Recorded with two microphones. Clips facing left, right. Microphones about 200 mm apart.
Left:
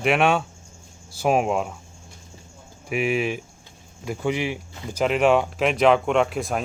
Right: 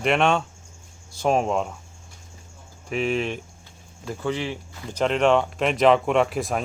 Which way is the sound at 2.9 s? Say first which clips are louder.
Left 1 dB; 10° left (ahead or behind).